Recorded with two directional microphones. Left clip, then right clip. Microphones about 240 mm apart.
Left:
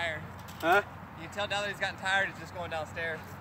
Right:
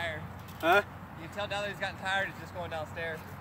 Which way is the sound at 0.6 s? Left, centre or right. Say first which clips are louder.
Even; right.